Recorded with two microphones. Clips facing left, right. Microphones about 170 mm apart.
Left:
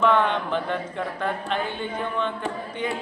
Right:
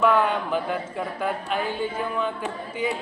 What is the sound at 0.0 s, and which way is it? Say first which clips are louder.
A man's voice: even; 5° right (ahead or behind).